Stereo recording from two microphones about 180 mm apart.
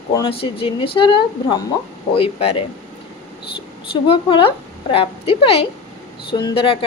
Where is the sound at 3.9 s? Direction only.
30° left (ahead or behind).